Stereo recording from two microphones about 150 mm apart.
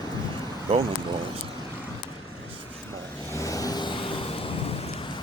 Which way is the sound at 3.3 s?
20° left (ahead or behind).